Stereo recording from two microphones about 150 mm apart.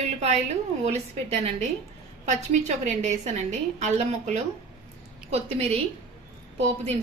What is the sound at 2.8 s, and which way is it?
A woman's voice, 50° right (ahead or behind).